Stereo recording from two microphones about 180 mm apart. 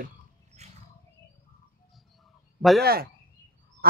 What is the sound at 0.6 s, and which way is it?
Wild animals, 40° right (ahead or behind).